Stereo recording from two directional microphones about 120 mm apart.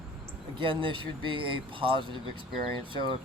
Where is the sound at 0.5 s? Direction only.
45° right (ahead or behind).